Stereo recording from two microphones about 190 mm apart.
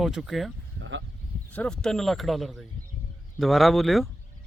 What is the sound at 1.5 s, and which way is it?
Speech, 5° left (ahead or behind).